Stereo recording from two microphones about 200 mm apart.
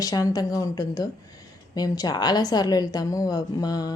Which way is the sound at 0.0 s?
20° left (ahead or behind).